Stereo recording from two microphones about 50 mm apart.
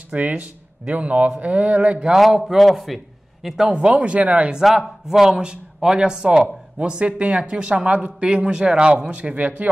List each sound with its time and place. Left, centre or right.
0.1 s a man's voice: right
2.3 s a man's voice: centre
3.9 s a man's voice: right
4.7 s a man's voice: centre; by 9.5 s right